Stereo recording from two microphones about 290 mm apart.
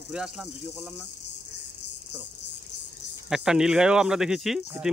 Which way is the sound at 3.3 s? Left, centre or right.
Centre.